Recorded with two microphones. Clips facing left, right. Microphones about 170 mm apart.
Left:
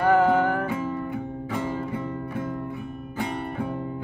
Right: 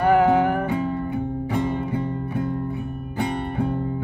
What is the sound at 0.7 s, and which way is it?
Music, 65° right (ahead or behind).